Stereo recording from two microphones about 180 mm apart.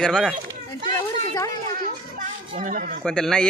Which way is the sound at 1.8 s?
45° right (ahead or behind).